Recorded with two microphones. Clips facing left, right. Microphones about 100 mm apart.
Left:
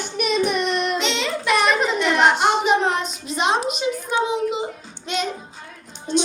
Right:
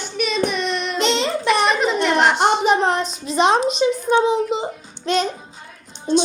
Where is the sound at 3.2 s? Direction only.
35° right (ahead or behind).